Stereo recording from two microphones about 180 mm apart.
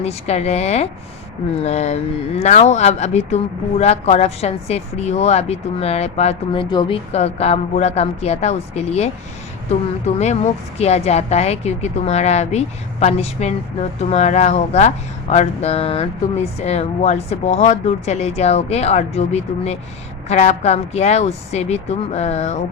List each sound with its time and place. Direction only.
0.0 s speech: 35° left (ahead or behind)
10.2 s speech: 40° left (ahead or behind)